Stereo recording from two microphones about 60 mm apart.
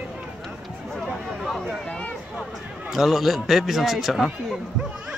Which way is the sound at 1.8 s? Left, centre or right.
Centre.